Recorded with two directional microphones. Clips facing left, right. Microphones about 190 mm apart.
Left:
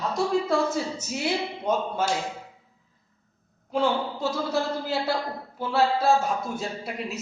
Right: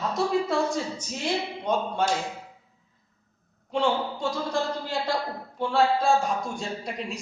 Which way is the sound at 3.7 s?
5° left (ahead or behind).